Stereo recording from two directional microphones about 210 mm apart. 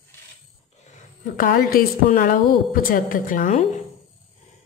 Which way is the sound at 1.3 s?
45° left (ahead or behind).